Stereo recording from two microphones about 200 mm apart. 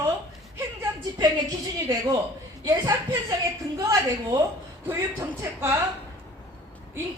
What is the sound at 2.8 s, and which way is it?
Speech, 15° right (ahead or behind).